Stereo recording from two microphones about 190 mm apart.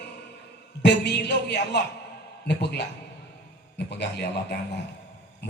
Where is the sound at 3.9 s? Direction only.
60° left (ahead or behind).